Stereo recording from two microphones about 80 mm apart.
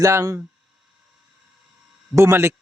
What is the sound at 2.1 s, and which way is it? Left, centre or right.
Speech, right.